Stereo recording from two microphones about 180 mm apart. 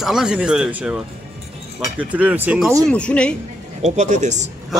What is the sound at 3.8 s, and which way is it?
Speech, 40° right (ahead or behind).